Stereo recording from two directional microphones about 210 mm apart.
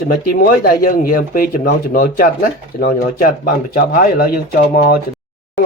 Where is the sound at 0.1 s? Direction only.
40° left (ahead or behind).